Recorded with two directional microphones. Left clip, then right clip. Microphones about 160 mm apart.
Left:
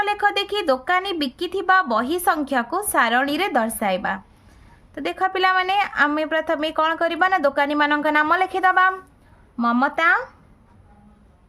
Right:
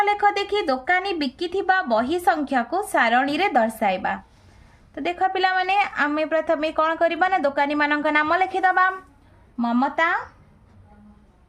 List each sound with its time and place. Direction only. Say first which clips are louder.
0.0 s a woman's voice: right 1 dB; 35° left (ahead or behind)
9.6 s speech: left 2 dB; 50° left (ahead or behind)